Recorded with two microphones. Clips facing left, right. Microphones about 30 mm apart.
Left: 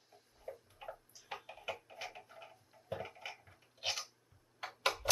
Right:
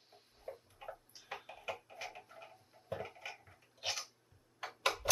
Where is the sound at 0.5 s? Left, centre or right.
Right.